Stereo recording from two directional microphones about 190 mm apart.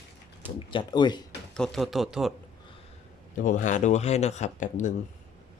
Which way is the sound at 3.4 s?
40° left (ahead or behind).